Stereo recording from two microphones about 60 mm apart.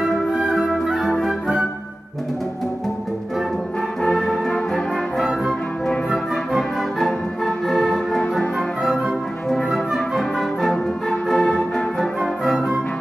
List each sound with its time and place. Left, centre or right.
0.4 s flute: centre
0.7 s flute: centre
4.0 s brass instrument: centre
6.5 s music: centre
9.5 s music: centre